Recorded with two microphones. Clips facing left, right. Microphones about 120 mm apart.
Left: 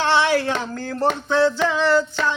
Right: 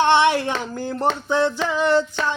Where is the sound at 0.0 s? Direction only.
20° right (ahead or behind).